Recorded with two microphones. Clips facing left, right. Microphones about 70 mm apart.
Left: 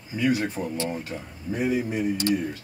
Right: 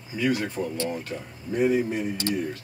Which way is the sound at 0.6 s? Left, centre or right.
Left.